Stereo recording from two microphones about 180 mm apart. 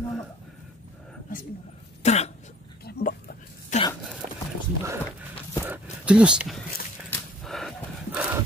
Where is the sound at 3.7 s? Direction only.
45° left (ahead or behind).